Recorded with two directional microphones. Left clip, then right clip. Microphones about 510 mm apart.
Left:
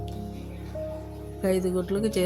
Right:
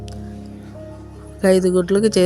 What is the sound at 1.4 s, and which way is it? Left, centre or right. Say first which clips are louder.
Speech: right 11 dB; left.